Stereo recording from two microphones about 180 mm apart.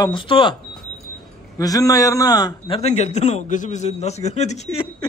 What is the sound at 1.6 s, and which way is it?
A man's voice, 20° left (ahead or behind).